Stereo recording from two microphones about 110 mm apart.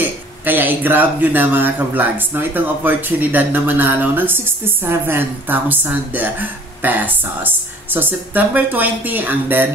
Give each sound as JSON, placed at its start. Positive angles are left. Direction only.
{"t": 0.0, "sound": "speech", "side_deg": -15}